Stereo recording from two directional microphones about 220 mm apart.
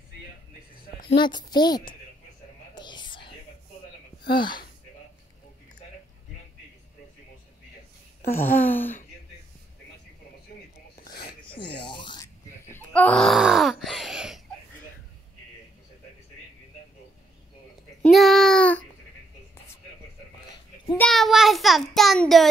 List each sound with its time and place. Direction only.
1.1 s a woman's voice: 20° left (ahead or behind)
2.7 s whispering: 20° left (ahead or behind)
8.4 s speech: 10° left (ahead or behind)
11.1 s a sound: 45° left (ahead or behind)
11.4 s a sound: 25° left (ahead or behind)
11.8 s grunt: 20° left (ahead or behind); by 14.4 s centre (ahead or behind)
18.0 s child singing: centre (ahead or behind)
21.0 s child singing: centre (ahead or behind)